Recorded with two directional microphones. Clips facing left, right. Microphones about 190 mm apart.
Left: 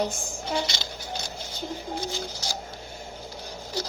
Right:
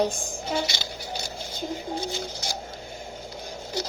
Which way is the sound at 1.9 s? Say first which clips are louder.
Right 1 dB; 55° right (ahead or behind).